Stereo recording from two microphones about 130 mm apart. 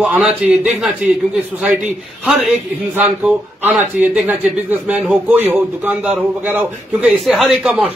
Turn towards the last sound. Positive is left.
turn(degrees=-5)  # may be behind; listen again after turning